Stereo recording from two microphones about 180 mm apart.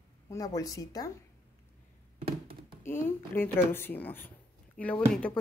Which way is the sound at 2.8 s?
10° left (ahead or behind).